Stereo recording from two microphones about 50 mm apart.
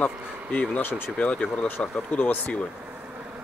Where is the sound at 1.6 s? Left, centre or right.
Left.